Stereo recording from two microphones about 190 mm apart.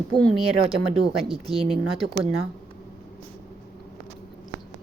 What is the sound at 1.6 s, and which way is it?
Speech, 30° right (ahead or behind).